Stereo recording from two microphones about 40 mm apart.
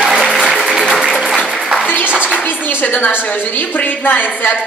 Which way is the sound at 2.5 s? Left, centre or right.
Left.